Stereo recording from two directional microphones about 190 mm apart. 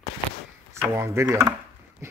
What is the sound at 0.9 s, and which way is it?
Speech, 15° right (ahead or behind).